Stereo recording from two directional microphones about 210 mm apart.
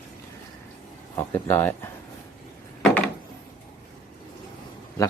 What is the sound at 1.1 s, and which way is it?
Speech, 10° left (ahead or behind).